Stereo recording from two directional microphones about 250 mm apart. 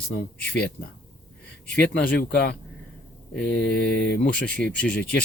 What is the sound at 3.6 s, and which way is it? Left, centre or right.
Speech, left.